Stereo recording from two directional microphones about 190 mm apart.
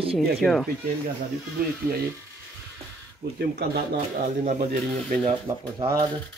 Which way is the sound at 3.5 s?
55° right (ahead or behind).